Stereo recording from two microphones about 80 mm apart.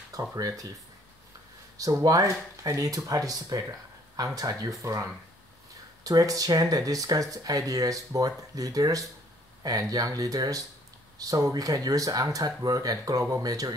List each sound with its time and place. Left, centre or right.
0.1 s speech: right
1.8 s speech: right
6.0 s speech: right